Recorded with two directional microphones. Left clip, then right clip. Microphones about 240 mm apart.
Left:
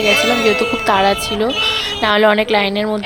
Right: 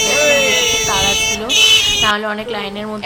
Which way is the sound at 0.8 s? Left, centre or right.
Left.